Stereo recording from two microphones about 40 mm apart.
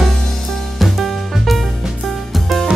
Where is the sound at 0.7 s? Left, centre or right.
Centre.